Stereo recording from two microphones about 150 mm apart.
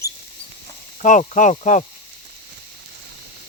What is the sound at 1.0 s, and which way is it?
Speech, 55° left (ahead or behind).